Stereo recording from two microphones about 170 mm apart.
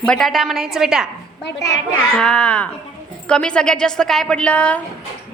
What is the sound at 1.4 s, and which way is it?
Speech, 90° left.